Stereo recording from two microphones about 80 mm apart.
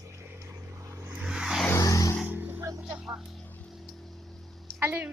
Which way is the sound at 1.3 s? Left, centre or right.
Centre.